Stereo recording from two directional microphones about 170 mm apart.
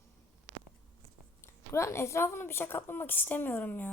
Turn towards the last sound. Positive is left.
turn(degrees=10)  # may be behind; listen again after turning